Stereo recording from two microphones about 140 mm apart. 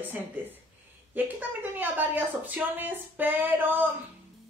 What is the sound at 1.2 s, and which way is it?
A woman's voice, 15° right (ahead or behind).